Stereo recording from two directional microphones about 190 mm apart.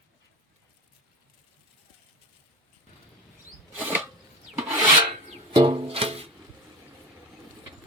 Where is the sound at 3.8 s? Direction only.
10° right (ahead or behind).